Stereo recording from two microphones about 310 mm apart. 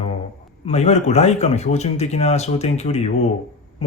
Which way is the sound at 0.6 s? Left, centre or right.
Left.